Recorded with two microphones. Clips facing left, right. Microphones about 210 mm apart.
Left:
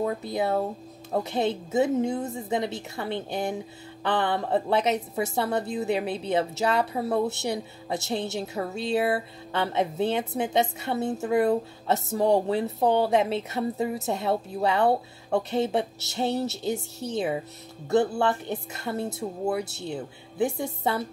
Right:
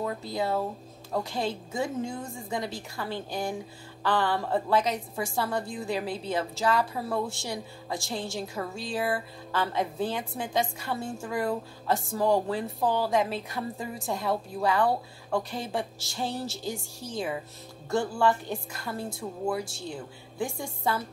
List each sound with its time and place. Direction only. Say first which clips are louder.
0.0 s a woman's voice: left 4 dB; 20° left (ahead or behind)
19.6 s speech: left 2 dB; 65° left (ahead or behind)
19.9 s a woman's voice: left 5 dB; 20° left (ahead or behind)